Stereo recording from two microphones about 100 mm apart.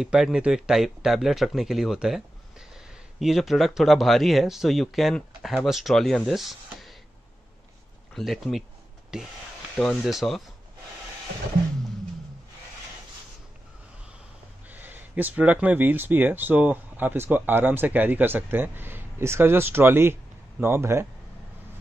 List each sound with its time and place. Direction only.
0.0 s speech: 5° right (ahead or behind)
8.1 s speech: centre (ahead or behind)
14.7 s speech: 20° right (ahead or behind)